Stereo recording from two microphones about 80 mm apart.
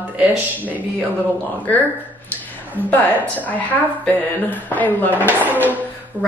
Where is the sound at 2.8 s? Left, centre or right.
Left.